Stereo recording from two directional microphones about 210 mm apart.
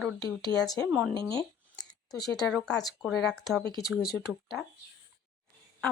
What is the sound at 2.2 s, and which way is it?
Speech, 5° left (ahead or behind).